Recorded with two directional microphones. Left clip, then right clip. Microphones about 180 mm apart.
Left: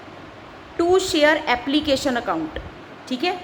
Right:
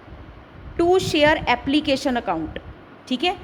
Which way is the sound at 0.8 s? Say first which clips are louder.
Even; 35° right (ahead or behind).